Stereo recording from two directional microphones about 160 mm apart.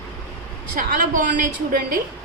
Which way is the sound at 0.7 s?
60° right (ahead or behind).